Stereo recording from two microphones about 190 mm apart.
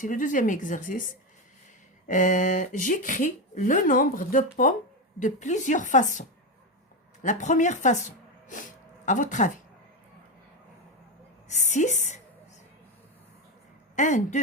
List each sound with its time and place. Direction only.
0.0 s speech: 45° left (ahead or behind)
2.0 s speech: 40° left (ahead or behind)
11.4 s speech: 40° left (ahead or behind)
13.9 s speech: 40° left (ahead or behind)